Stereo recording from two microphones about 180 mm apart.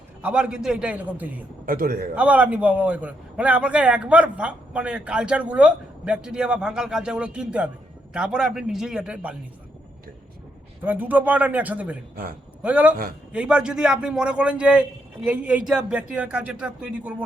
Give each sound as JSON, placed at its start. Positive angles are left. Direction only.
{"t": 0.2, "sound": "a man's voice", "side_deg": -5}
{"t": 1.6, "sound": "a man's voice", "side_deg": -50}
{"t": 2.1, "sound": "a man's voice", "side_deg": -10}
{"t": 10.8, "sound": "a man's voice", "side_deg": -10}